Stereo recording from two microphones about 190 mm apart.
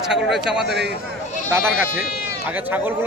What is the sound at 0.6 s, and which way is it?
Speech, 60° right (ahead or behind).